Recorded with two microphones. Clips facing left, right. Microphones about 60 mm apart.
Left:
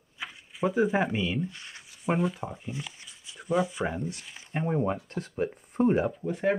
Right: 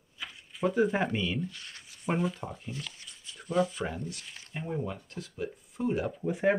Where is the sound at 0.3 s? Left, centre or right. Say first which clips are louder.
Left 1 dB; centre.